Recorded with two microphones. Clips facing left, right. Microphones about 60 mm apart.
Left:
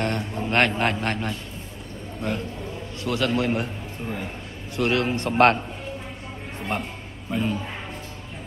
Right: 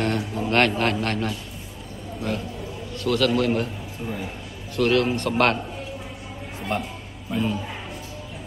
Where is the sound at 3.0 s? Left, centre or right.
Centre.